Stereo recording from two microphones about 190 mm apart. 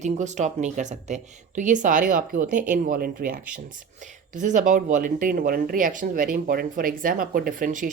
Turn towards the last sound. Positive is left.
turn(degrees=-45)  # may be behind; listen again after turning